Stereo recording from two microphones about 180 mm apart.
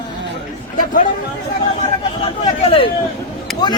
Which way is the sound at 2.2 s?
30° left (ahead or behind).